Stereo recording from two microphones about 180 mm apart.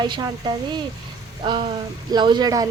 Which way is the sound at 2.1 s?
25° right (ahead or behind).